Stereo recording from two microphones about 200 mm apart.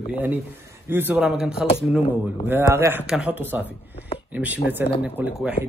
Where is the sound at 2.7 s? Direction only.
15° right (ahead or behind).